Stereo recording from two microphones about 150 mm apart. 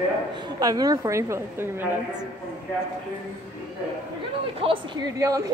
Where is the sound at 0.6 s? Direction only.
25° right (ahead or behind).